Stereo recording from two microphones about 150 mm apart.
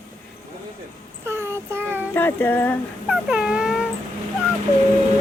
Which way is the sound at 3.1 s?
5° right (ahead or behind).